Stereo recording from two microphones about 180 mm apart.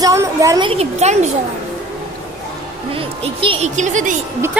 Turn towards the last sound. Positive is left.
turn(degrees=-45)  # may be behind; listen again after turning